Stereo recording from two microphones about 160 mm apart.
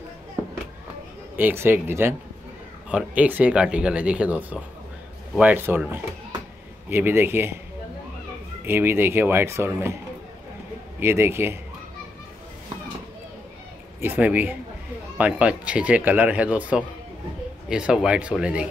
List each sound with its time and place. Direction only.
1.3 s speech: 15° right (ahead or behind)
8.6 s speech: 15° right (ahead or behind)
11.0 s speech: 15° right (ahead or behind)
14.0 s speech: 10° right (ahead or behind)